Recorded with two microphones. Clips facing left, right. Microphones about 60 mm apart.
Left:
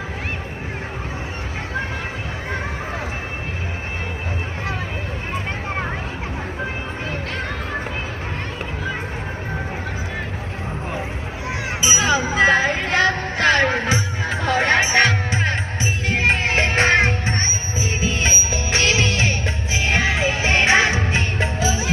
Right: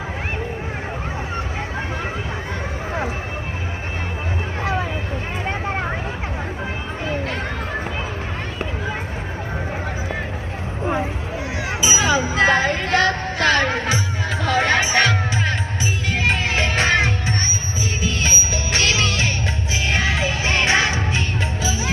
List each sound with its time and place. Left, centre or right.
11.8 s music: centre
14.3 s music: left